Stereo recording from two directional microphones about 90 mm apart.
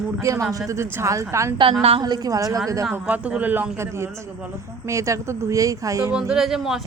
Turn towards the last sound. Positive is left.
turn(degrees=-5)  # may be behind; listen again after turning